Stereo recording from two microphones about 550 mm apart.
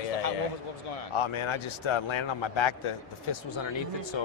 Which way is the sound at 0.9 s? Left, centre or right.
Left.